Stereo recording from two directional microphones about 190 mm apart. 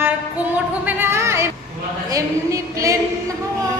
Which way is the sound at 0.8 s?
10° right (ahead or behind).